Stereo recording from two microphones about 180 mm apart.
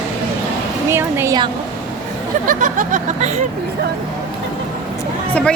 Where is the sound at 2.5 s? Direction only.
45° right (ahead or behind).